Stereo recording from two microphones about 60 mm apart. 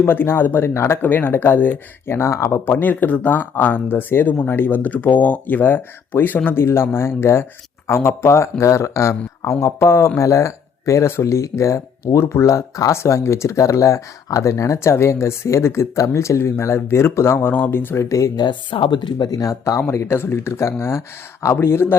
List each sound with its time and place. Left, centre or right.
0.0 s speech: left
0.7 s speech: left
1.0 s speech: left
17.4 s speech: left
19.2 s speech: left
19.9 s speech: left